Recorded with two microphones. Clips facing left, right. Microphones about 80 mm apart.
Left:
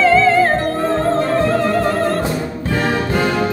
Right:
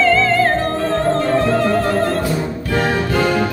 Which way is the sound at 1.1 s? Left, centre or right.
Centre.